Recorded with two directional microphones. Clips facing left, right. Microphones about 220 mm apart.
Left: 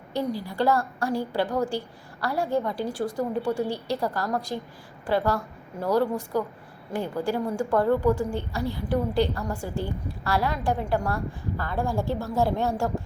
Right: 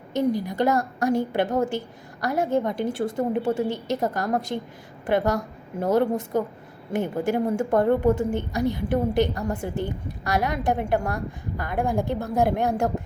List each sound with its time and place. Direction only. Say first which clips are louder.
0.1 s a woman's voice: right 5 dB; 20° right (ahead or behind)